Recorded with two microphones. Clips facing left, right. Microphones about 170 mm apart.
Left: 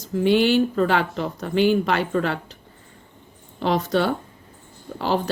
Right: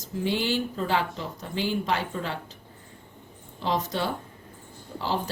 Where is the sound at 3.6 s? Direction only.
70° left (ahead or behind).